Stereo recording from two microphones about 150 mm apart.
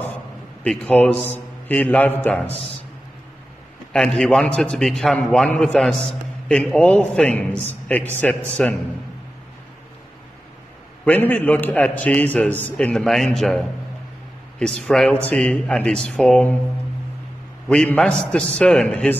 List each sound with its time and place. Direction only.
0.7 s a man's voice: 5° left (ahead or behind)
3.9 s a man's voice: 5° left (ahead or behind)
11.1 s a man's voice: 10° left (ahead or behind)
17.6 s a man's voice: 5° left (ahead or behind)